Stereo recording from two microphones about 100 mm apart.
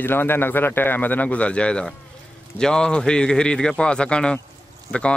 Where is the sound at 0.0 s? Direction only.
20° left (ahead or behind).